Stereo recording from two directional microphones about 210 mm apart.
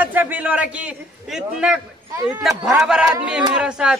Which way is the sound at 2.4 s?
Centre (ahead or behind).